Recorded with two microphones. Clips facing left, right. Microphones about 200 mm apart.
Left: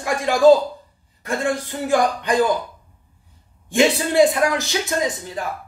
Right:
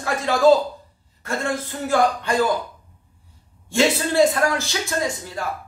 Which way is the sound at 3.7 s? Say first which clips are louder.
Left 2 dB; 15° left (ahead or behind).